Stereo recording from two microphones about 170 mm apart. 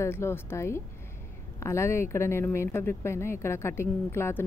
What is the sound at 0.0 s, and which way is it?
Speech, 15° left (ahead or behind).